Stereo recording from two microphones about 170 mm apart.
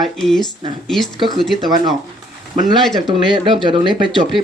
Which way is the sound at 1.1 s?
30° right (ahead or behind).